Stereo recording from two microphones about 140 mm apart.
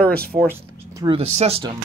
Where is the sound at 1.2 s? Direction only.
50° right (ahead or behind).